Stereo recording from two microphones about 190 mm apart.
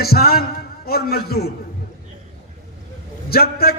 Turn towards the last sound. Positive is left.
turn(degrees=55)  # may be behind; listen again after turning